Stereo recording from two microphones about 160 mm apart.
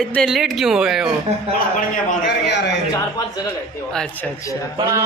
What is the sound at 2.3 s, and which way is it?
Speech, 90° left.